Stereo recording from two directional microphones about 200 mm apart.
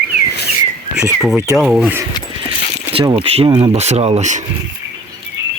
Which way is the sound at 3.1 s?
25° right (ahead or behind).